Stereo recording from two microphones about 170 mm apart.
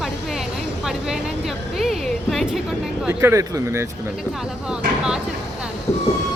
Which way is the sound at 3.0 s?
10° right (ahead or behind).